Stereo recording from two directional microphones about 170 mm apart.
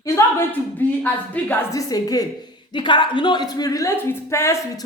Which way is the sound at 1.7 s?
20° left (ahead or behind).